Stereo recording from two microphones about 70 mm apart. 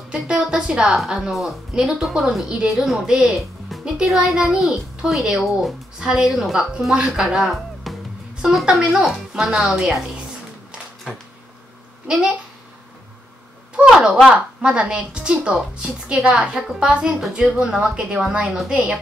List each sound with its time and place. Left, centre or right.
0.1 s a woman's voice: centre
12.1 s a woman's voice: centre
13.7 s a woman's voice: centre